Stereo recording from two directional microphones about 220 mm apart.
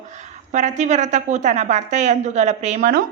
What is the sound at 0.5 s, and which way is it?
A woman's voice, 35° right (ahead or behind).